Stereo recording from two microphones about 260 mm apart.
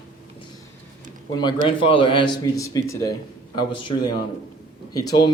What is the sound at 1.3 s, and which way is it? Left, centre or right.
A man's voice, centre.